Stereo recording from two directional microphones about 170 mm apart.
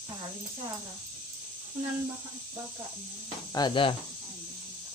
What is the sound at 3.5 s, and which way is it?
Speech, 30° left (ahead or behind).